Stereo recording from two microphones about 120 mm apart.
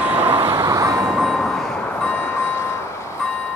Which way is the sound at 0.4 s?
30° right (ahead or behind).